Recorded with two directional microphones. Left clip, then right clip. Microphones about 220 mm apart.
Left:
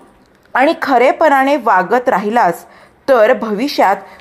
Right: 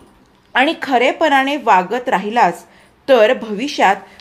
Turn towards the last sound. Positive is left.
turn(degrees=20)  # may be behind; listen again after turning